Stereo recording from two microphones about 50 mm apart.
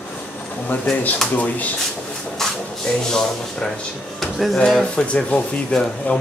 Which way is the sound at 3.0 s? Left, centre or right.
Centre.